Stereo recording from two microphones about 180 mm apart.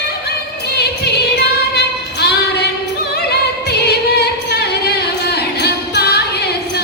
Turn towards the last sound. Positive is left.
turn(degrees=65)  # may be behind; listen again after turning